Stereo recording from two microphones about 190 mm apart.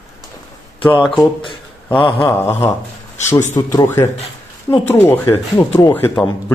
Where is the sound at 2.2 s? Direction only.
15° left (ahead or behind).